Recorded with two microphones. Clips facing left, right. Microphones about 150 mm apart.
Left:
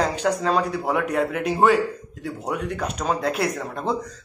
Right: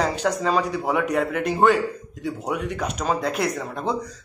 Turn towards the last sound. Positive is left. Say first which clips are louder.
# even
turn(degrees=0)  # may be behind; listen again after turning